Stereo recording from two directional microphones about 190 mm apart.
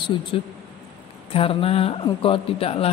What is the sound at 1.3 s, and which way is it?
Speech, 30° left (ahead or behind).